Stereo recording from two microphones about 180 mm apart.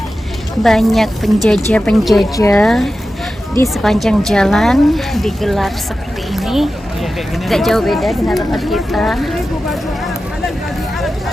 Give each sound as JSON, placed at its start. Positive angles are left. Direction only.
{"t": 0.6, "sound": "speech", "side_deg": 0}
{"t": 2.3, "sound": "a woman's voice", "side_deg": 15}
{"t": 2.6, "sound": "speech", "side_deg": 0}